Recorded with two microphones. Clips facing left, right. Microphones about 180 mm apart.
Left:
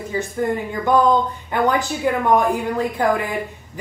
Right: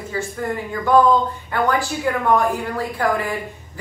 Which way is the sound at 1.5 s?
20° left (ahead or behind).